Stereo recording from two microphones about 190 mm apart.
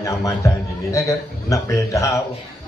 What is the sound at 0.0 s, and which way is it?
A man's voice, 15° left (ahead or behind).